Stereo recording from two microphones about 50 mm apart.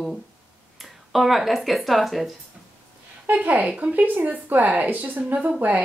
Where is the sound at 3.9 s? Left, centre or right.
Right.